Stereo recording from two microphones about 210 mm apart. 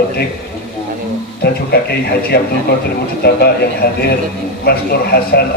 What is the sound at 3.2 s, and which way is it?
Speech, 50° left (ahead or behind).